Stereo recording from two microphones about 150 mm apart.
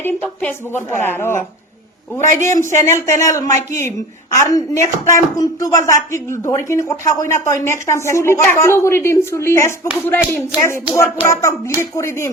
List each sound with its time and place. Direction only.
0.0 s a woman's voice: 10° left (ahead or behind)
2.6 s speech: 15° left (ahead or behind)
3.5 s speech: 55° right (ahead or behind)
4.4 s a woman's voice: 20° left (ahead or behind)